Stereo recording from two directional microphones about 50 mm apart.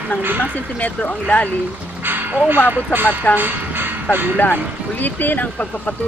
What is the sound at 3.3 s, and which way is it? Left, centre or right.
Music, right.